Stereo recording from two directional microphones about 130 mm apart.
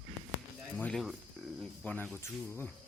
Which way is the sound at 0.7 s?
10° left (ahead or behind).